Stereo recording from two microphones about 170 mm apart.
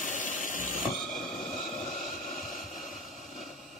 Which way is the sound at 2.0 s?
Centre (ahead or behind).